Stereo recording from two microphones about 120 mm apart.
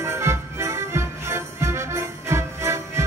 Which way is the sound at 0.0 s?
20° right (ahead or behind).